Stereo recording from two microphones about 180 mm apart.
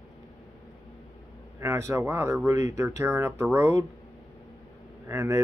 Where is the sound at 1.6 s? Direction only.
15° right (ahead or behind).